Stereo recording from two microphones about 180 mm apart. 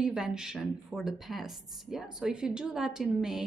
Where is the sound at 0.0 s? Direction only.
5° right (ahead or behind).